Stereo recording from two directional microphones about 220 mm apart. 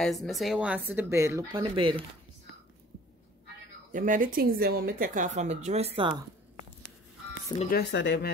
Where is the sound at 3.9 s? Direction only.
40° right (ahead or behind); by 6.2 s 20° right (ahead or behind).